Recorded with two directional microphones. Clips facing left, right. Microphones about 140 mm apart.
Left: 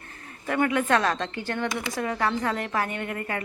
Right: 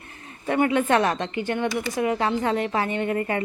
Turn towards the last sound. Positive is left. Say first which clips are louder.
# right 7 dB
turn(degrees=-25)  # may be behind; listen again after turning